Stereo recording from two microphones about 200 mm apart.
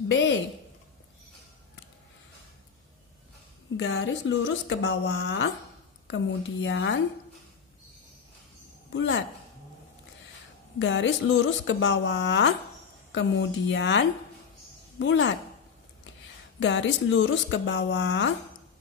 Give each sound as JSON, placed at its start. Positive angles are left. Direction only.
{"t": 0.1, "sound": "speech", "side_deg": 65}
{"t": 3.7, "sound": "speech", "side_deg": 65}
{"t": 8.9, "sound": "speech", "side_deg": 65}
{"t": 10.8, "sound": "speech", "side_deg": 70}
{"t": 16.5, "sound": "speech", "side_deg": 65}